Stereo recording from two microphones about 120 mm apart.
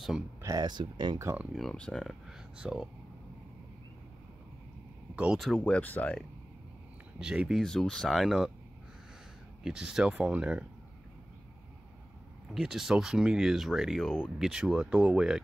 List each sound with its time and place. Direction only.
0.4 s speech: 30° right (ahead or behind)
1.2 s speech: 15° right (ahead or behind)
1.5 s speech: 5° left (ahead or behind)
5.1 s speech: 10° right (ahead or behind)
5.4 s speech: 5° left (ahead or behind)
7.2 s speech: 5° right (ahead or behind)
7.6 s speech: 5° left (ahead or behind)
9.6 s speech: 5° right (ahead or behind)
12.5 s speech: 5° right (ahead or behind)